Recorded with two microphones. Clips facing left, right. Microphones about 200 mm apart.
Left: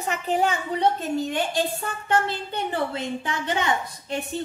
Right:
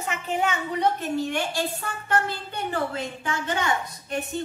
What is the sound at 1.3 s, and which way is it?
A woman's voice, 20° left (ahead or behind).